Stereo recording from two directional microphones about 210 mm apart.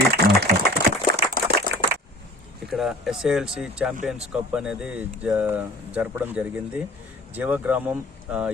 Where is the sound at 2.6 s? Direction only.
Centre (ahead or behind).